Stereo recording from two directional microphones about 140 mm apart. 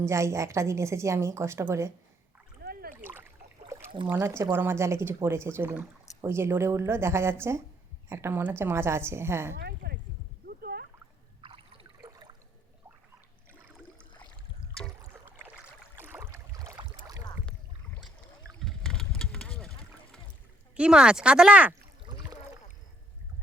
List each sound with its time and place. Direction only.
0.0 s a woman's voice: 20° right (ahead or behind)
2.9 s splash: 15° right (ahead or behind)
4.0 s a woman's voice: 15° right (ahead or behind)
10.4 s a sound: 90° right
11.4 s a sound: 40° right (ahead or behind)
12.0 s a sound: 30° right (ahead or behind)
13.5 s a sound: 15° right (ahead or behind)
15.0 s rowboat: 20° right (ahead or behind)
16.0 s boat: 15° right (ahead or behind)
18.6 s boat: 5° left (ahead or behind)
20.7 s speech: 5° right (ahead or behind)
22.0 s rowboat: 30° right (ahead or behind)